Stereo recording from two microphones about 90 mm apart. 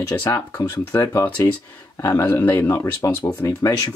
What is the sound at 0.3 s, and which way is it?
Speech, 40° left (ahead or behind).